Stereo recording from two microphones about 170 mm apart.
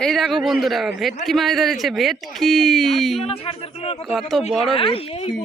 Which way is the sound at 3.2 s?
35° left (ahead or behind).